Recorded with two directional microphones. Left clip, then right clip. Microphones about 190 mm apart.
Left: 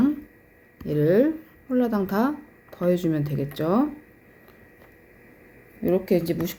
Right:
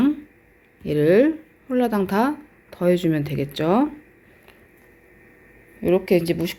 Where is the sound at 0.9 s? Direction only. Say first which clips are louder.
Right 4 dB; 35° right (ahead or behind).